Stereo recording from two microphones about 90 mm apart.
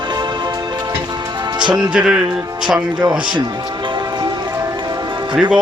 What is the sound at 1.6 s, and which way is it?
Speech, 55° right (ahead or behind).